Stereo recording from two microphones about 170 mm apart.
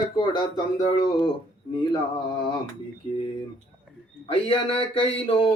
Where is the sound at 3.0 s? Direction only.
35° left (ahead or behind).